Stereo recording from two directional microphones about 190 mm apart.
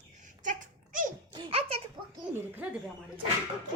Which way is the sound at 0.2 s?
40° right (ahead or behind).